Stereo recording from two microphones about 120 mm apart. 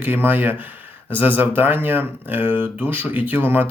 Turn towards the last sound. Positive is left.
turn(degrees=-15)  # may be behind; listen again after turning